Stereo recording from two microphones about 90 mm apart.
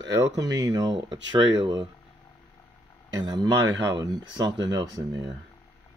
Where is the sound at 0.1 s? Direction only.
45° right (ahead or behind).